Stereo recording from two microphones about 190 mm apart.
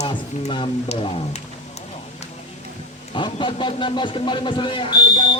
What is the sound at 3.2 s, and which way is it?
Speech, 25° left (ahead or behind).